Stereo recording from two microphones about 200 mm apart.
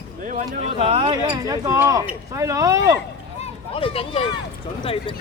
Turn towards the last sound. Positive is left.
turn(degrees=25)  # may be behind; listen again after turning